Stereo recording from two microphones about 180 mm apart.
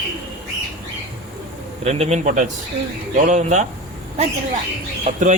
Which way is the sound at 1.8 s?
35° right (ahead or behind).